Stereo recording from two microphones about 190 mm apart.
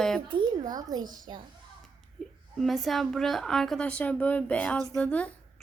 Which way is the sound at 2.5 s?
Centre (ahead or behind).